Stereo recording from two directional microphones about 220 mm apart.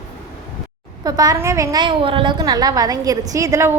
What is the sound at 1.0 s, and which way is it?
A woman's voice, 15° right (ahead or behind).